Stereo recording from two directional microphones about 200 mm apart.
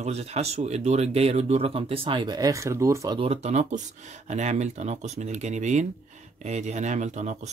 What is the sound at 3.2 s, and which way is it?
Speech, 35° right (ahead or behind).